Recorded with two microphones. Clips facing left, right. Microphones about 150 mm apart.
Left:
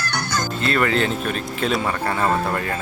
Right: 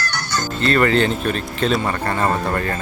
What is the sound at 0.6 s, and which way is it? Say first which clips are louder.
Speech: right 5 dB; 5° left (ahead or behind).